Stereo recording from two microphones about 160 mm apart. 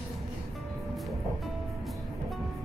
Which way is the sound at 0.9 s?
Centre (ahead or behind).